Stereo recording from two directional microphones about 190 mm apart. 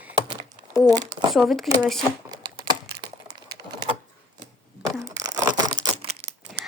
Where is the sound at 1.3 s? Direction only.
Centre (ahead or behind).